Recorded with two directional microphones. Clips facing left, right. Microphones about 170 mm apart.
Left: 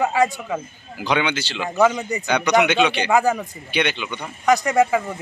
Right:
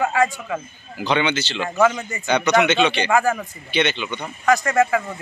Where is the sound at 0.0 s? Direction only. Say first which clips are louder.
Left 1 dB; 15° left (ahead or behind).